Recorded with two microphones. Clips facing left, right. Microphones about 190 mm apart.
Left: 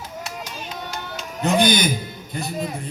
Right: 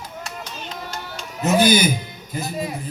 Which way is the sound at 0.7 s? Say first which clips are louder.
Left 1 dB; 10° left (ahead or behind).